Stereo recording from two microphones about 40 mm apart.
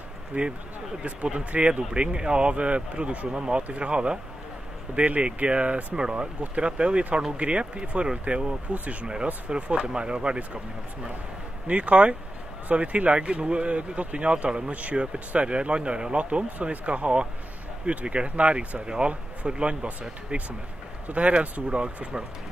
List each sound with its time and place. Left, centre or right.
0.3 s speech: right
5.9 s speech: right
11.6 s speech: right